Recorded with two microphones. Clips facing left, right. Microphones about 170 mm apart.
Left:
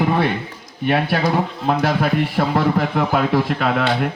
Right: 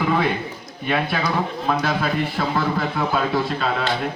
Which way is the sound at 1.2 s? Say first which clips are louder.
Left 4 dB; 45° left (ahead or behind).